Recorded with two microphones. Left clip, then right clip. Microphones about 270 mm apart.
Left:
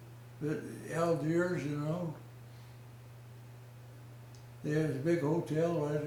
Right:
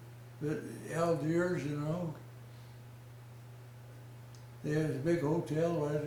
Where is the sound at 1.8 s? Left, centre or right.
Left.